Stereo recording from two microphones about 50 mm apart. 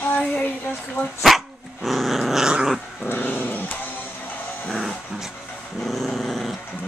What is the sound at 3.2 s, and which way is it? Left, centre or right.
Music, left.